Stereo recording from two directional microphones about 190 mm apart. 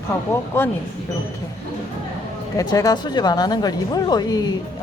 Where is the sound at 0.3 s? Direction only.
10° left (ahead or behind).